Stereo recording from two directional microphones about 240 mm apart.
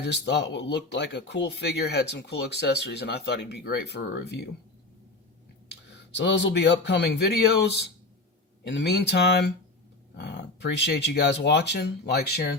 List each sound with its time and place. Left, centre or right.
0.0 s speech: left
6.1 s speech: left